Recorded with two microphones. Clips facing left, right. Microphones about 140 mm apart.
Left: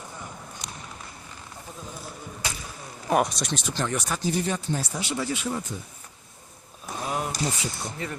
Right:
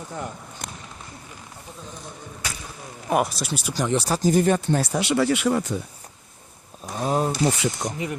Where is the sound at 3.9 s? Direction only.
30° right (ahead or behind); by 5.8 s 75° right (ahead or behind).